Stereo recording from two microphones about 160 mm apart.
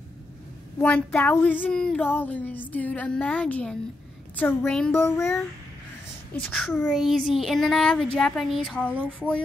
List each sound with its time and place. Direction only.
0.7 s speech: 10° left (ahead or behind)
4.9 s speech: 15° left (ahead or behind)
6.3 s speech: 5° left (ahead or behind)